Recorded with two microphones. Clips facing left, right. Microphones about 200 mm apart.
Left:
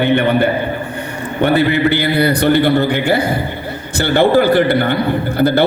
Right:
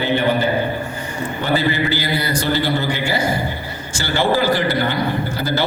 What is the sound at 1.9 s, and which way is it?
A man's voice, 60° left (ahead or behind).